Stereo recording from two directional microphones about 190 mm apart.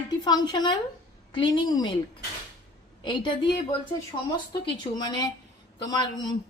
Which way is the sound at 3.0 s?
25° left (ahead or behind).